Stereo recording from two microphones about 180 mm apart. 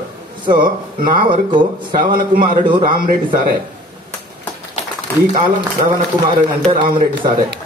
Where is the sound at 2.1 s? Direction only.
55° right (ahead or behind).